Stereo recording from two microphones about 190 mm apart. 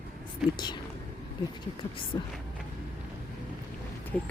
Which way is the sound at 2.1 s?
25° left (ahead or behind).